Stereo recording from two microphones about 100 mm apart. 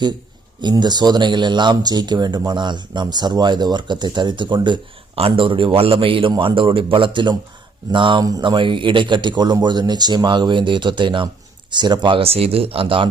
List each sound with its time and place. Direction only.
0.6 s speech: 45° right (ahead or behind)
5.1 s a man's voice: 70° right (ahead or behind); by 12.2 s 50° right (ahead or behind)
12.2 s speech: 75° right (ahead or behind)